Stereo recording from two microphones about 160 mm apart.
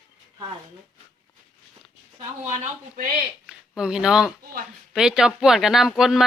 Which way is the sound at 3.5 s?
5° right (ahead or behind).